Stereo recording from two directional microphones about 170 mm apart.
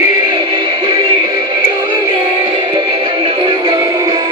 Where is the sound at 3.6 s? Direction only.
20° right (ahead or behind).